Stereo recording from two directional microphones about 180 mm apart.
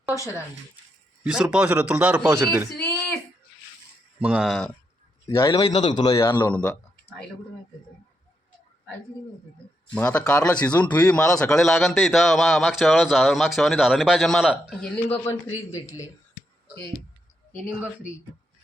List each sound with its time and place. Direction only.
1.2 s a man's voice: 5° right (ahead or behind)
4.2 s a man's voice: 5° right (ahead or behind)
5.2 s a man's voice: 25° left (ahead or behind)
6.2 s speech: 10° left (ahead or behind)
9.9 s a man's voice: 5° left (ahead or behind)
14.8 s speech: 10° left (ahead or behind)
17.7 s a man's voice: 10° right (ahead or behind)